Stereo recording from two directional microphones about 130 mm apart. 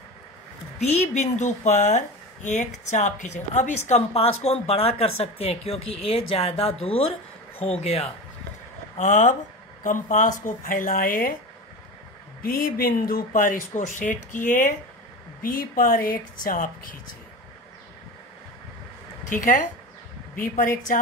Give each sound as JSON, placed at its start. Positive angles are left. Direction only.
{"t": 0.7, "sound": "a woman's voice", "side_deg": 60}
{"t": 8.9, "sound": "speech", "side_deg": 75}
{"t": 9.8, "sound": "speech", "side_deg": 90}
{"t": 12.6, "sound": "speech", "side_deg": 90}
{"t": 19.2, "sound": "speech", "side_deg": 90}